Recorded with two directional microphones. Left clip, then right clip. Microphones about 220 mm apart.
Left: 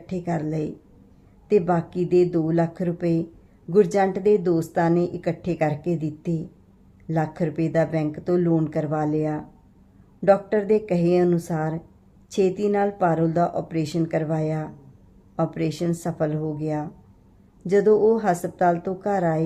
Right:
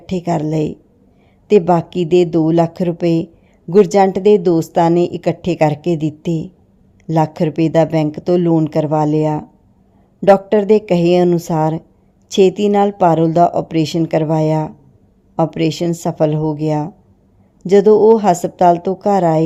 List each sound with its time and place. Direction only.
0.0 s a woman's voice: 30° right (ahead or behind)